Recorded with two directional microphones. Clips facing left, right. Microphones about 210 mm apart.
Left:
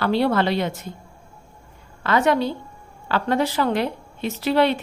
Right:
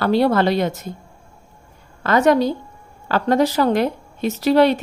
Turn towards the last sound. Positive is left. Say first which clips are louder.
# right 5 dB
turn(degrees=-40)  # may be behind; listen again after turning